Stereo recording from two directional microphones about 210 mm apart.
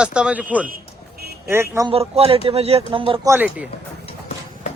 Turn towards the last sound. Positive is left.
turn(degrees=30)  # may be behind; listen again after turning